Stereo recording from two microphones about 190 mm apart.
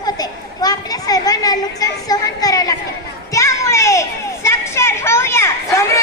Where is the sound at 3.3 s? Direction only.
15° left (ahead or behind).